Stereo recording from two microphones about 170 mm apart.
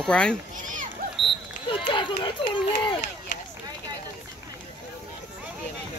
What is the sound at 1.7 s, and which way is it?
Run, 30° left (ahead or behind).